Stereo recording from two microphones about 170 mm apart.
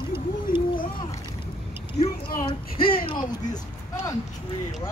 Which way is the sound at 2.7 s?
60° left (ahead or behind).